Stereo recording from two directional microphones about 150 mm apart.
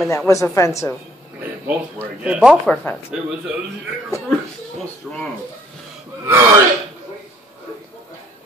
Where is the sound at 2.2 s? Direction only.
5° right (ahead or behind).